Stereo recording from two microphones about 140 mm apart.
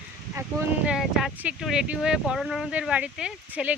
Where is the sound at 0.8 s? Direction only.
5° right (ahead or behind).